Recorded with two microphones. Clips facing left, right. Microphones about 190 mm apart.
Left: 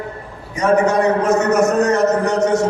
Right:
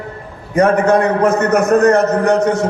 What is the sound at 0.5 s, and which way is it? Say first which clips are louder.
A man's voice: right 3 dB; 55° right (ahead or behind).